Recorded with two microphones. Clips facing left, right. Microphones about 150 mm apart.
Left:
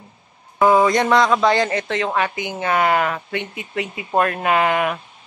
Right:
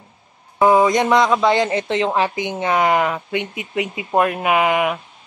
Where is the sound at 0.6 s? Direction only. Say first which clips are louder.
Right 1 dB; 15° right (ahead or behind).